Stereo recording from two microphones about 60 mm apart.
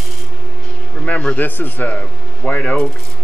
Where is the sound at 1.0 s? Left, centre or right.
Left.